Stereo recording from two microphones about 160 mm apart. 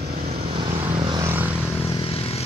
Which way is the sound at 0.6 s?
30° right (ahead or behind).